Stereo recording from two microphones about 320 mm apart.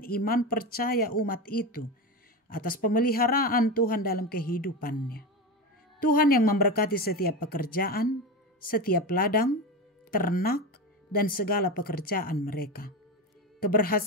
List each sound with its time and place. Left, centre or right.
0.0 s speech: left